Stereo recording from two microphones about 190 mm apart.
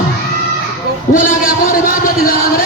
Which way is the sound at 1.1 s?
45° left (ahead or behind).